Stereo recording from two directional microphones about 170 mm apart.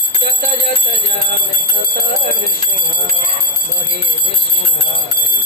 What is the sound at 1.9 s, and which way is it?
Speech, 65° right (ahead or behind).